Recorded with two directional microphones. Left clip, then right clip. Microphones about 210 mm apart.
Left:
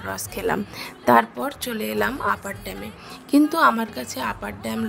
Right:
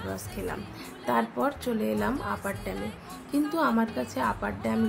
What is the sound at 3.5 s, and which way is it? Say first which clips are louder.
Speech: left 5 dB; 50° left (ahead or behind).